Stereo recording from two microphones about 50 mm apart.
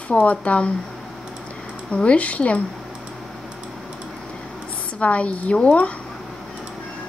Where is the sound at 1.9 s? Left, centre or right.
Left.